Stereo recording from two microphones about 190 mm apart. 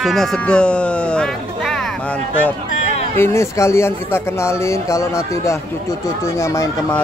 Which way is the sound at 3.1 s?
15° left (ahead or behind).